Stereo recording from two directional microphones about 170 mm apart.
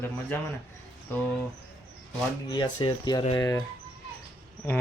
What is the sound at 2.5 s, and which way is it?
Speech, 25° left (ahead or behind).